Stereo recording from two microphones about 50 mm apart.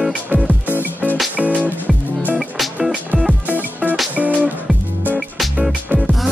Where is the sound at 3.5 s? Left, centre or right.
Right.